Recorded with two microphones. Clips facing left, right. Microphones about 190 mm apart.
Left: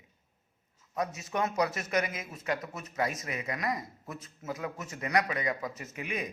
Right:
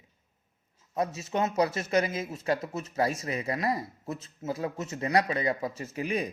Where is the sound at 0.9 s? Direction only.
30° right (ahead or behind).